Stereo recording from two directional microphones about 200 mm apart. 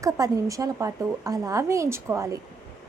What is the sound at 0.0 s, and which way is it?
A woman's voice, 15° right (ahead or behind).